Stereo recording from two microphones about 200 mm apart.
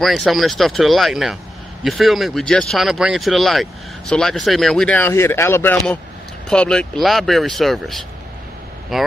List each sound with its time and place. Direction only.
0.0 s speech: centre (ahead or behind)